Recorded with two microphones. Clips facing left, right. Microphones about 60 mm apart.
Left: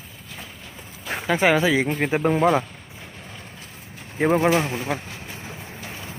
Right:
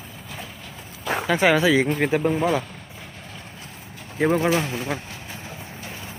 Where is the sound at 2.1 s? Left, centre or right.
Left.